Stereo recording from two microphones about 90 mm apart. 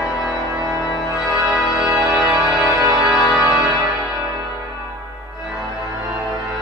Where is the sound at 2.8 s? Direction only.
35° right (ahead or behind).